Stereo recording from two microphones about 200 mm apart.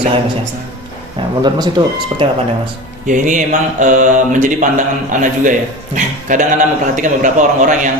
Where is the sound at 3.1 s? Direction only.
40° right (ahead or behind).